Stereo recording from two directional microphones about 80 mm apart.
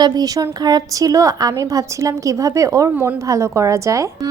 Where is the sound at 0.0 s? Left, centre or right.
Right.